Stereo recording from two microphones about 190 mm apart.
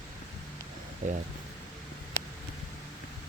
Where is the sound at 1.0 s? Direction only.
40° right (ahead or behind).